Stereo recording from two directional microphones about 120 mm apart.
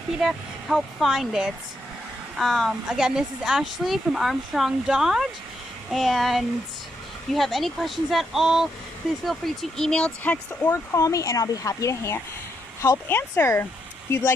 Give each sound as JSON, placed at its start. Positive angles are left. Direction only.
{"t": 0.2, "sound": "speech", "side_deg": 0}
{"t": 10.9, "sound": "speech", "side_deg": 25}